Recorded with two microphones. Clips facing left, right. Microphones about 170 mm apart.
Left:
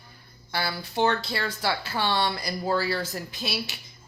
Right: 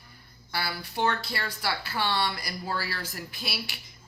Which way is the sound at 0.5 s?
25° left (ahead or behind).